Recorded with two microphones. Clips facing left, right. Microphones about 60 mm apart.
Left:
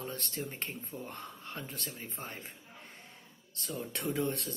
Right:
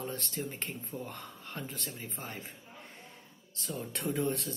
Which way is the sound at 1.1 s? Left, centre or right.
Left.